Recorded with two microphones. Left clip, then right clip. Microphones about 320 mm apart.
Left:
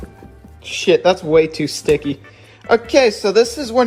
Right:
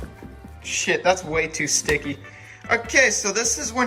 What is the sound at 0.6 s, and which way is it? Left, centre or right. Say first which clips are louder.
Speech: left 7 dB; centre.